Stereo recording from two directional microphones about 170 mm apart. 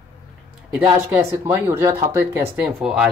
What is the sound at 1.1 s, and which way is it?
Speech, 10° right (ahead or behind).